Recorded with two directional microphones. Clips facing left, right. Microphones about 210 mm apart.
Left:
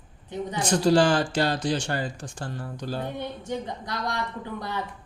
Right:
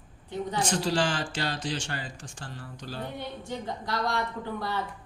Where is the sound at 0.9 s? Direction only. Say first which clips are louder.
Left 8 dB; 40° left (ahead or behind).